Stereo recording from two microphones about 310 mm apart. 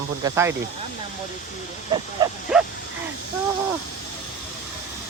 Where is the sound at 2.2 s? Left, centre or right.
Centre.